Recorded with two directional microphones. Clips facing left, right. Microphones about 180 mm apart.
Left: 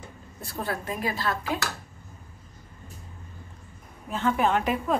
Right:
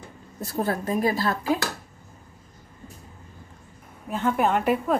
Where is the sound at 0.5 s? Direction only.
40° right (ahead or behind).